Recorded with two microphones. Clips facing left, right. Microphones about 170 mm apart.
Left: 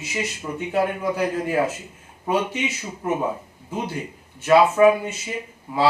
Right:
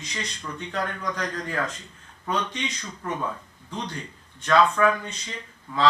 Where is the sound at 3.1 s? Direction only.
20° left (ahead or behind).